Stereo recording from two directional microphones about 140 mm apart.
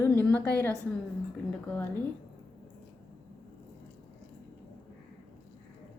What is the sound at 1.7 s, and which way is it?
Speech, 10° left (ahead or behind).